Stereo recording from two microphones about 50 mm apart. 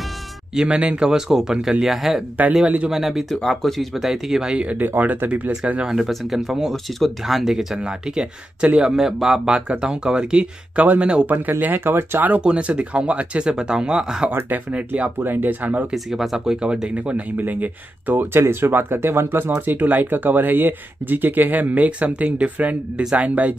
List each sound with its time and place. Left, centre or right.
0.7 s speech: right; by 3.8 s centre
3.9 s speech: centre
4.7 s speech: right
5.9 s speech: centre
7.8 s speech: right
8.9 s speech: centre
11.2 s speech: right
12.4 s speech: right
14.5 s speech: right
15.1 s speech: right
15.9 s speech: centre
16.6 s speech: centre; by 18.3 s right
18.3 s speech: right